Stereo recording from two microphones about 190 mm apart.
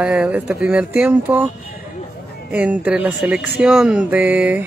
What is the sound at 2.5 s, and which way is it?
Speech, 10° right (ahead or behind).